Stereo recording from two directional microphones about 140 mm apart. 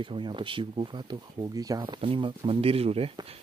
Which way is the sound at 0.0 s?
35° right (ahead or behind).